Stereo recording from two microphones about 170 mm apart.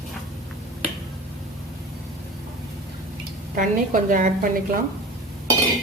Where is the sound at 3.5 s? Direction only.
50° right (ahead or behind).